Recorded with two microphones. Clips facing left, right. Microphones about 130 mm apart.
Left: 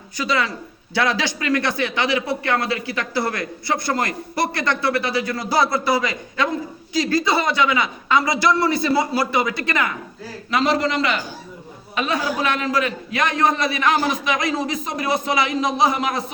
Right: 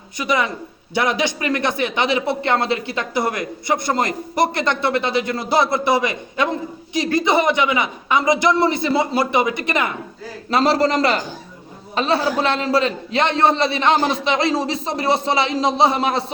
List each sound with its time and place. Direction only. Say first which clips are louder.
0.2 s a man's voice: right 2 dB; 20° right (ahead or behind)
10.5 s a man's voice: right 3 dB; 35° right (ahead or behind)